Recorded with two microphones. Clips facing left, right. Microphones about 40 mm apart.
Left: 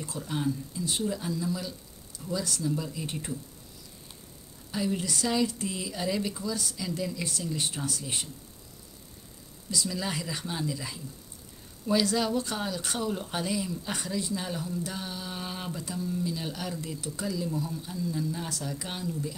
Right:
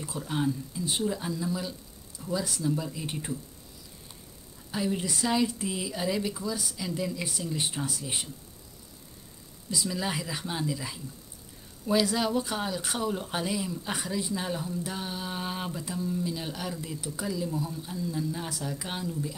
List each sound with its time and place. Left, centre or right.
0.0 s speech: centre
4.6 s speech: centre
9.7 s speech: centre